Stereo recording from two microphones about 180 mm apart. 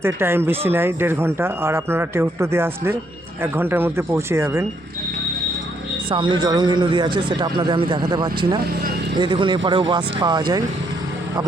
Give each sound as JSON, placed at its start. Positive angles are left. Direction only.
{"t": 0.0, "sound": "speech", "side_deg": -15}
{"t": 6.1, "sound": "speech", "side_deg": -25}